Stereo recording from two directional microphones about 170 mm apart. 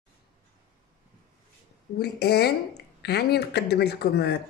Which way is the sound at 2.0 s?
70° left (ahead or behind).